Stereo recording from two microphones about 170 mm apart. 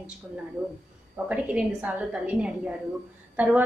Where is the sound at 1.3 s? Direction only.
10° right (ahead or behind).